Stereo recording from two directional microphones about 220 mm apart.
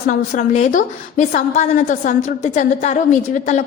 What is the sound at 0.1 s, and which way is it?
A woman's voice, 35° left (ahead or behind).